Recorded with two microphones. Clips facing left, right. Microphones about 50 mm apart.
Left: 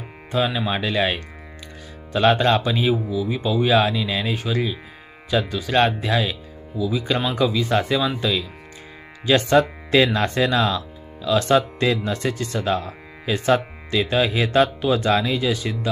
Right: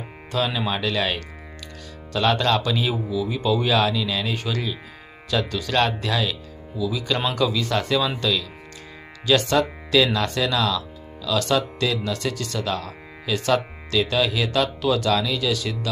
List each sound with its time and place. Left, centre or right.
0.3 s speech: centre
9.5 s speech: left